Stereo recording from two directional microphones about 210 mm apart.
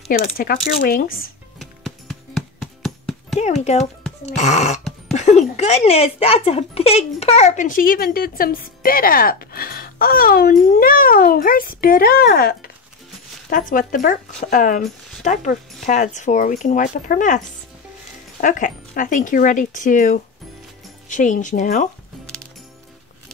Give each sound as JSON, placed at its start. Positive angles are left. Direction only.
{"t": 0.2, "sound": "speech", "side_deg": 45}
{"t": 1.6, "sound": "music", "side_deg": 0}
{"t": 3.3, "sound": "speech", "side_deg": 30}
{"t": 18.4, "sound": "speech", "side_deg": 40}